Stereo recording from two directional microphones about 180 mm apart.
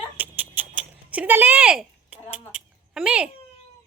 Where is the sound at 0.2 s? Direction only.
10° right (ahead or behind).